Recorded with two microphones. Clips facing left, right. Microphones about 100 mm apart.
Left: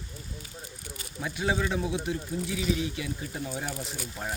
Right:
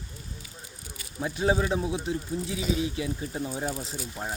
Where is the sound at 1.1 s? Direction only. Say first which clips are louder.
Right 4 dB; 30° right (ahead or behind).